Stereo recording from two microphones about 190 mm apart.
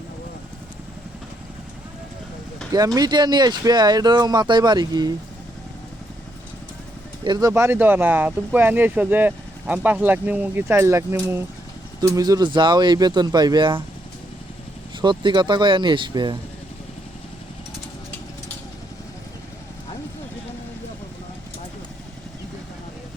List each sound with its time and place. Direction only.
2.7 s speech: 20° right (ahead or behind)
7.3 s speech: 20° right (ahead or behind)
15.0 s speech: 25° right (ahead or behind)